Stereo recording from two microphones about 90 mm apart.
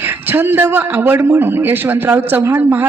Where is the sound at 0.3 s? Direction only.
20° right (ahead or behind).